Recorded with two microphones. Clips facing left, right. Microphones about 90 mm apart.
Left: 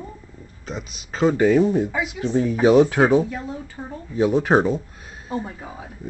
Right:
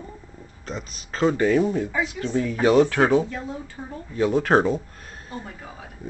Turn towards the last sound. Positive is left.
turn(degrees=20)  # may be behind; listen again after turning